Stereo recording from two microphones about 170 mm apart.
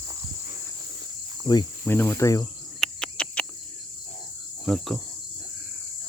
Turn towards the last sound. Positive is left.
turn(degrees=0)  # may be behind; listen again after turning